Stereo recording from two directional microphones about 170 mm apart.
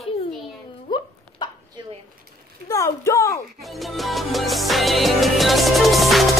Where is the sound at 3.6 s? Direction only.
Centre (ahead or behind).